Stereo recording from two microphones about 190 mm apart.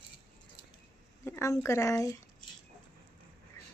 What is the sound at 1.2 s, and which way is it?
Speech, 15° left (ahead or behind).